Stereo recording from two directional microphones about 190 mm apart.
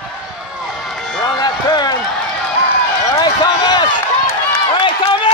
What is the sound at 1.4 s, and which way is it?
Run, 20° left (ahead or behind).